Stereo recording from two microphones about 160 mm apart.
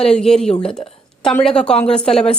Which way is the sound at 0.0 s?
5° left (ahead or behind).